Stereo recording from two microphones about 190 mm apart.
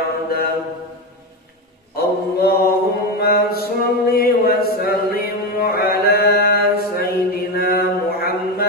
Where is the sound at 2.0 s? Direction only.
55° left (ahead or behind).